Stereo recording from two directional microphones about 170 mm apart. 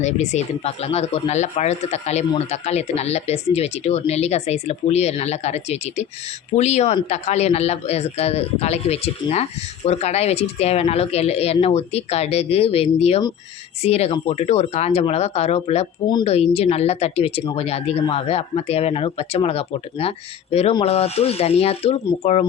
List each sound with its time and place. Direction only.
0.0 s speech: 45° left (ahead or behind)